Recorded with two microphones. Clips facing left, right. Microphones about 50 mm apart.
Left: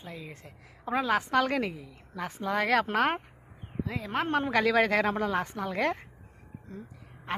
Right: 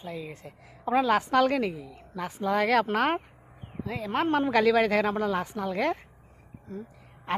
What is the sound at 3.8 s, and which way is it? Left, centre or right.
Speech, centre.